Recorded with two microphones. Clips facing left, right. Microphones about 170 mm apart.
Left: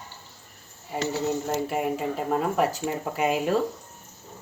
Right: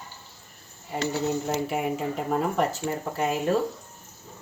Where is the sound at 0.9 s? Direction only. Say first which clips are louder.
Even; centre (ahead or behind).